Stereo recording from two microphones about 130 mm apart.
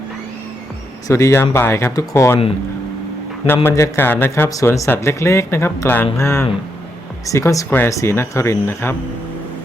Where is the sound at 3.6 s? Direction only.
25° left (ahead or behind).